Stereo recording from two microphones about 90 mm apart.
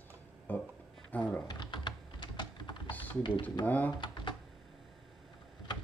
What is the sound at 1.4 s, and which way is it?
Typing, 55° left (ahead or behind).